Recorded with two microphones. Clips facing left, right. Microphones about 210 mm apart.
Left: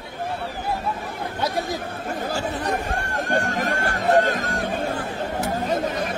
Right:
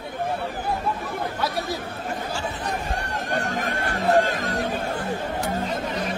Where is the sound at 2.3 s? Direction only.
55° left (ahead or behind).